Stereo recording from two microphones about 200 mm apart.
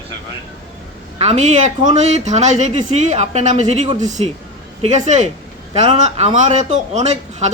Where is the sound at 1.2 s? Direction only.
35° right (ahead or behind).